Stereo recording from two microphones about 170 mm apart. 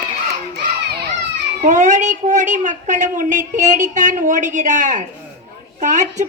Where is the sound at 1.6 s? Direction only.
45° right (ahead or behind).